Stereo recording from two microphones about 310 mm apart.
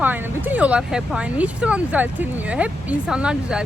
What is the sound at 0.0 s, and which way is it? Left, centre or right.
Speech, centre.